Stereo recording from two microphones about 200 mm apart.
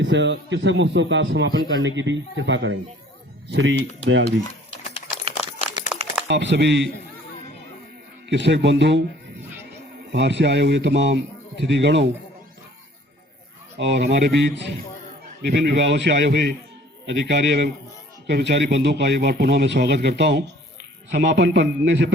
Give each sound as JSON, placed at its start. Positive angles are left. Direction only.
{"t": 0.0, "sound": "speech", "side_deg": -65}
{"t": 4.7, "sound": "a sound", "side_deg": 35}
{"t": 5.2, "sound": "a sound", "side_deg": -30}
{"t": 6.2, "sound": "speech", "side_deg": -60}
{"t": 8.3, "sound": "speech", "side_deg": -60}
{"t": 10.1, "sound": "speech", "side_deg": -60}
{"t": 13.7, "sound": "speech", "side_deg": -60}